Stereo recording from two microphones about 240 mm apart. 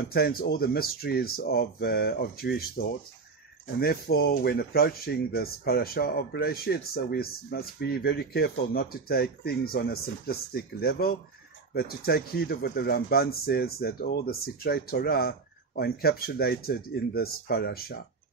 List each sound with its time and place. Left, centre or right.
0.1 s speech: left